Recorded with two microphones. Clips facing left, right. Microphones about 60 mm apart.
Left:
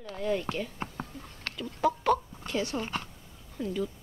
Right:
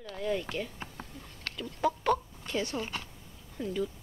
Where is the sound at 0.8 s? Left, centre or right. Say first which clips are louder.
Left 6 dB; left.